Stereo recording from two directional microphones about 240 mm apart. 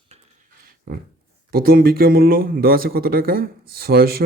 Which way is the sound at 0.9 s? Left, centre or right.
Right.